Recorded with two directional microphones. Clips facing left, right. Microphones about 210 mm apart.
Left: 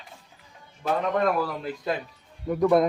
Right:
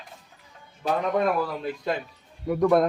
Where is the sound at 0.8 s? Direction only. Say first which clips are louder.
Even; 10° right (ahead or behind).